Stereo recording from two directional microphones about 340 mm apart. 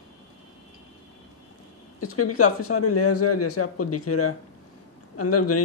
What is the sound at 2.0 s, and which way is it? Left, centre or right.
A man's voice, left.